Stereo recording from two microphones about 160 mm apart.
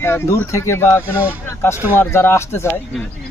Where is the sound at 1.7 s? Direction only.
15° right (ahead or behind).